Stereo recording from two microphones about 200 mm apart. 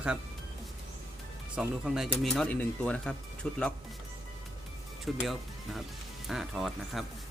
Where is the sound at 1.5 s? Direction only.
5° right (ahead or behind).